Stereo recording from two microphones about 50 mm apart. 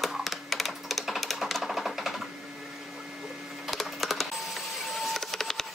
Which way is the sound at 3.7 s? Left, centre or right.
Centre.